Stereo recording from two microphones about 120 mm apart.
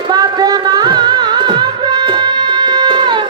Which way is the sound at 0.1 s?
35° right (ahead or behind).